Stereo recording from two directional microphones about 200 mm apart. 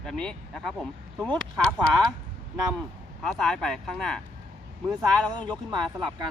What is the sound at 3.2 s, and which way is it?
Speech, centre (ahead or behind).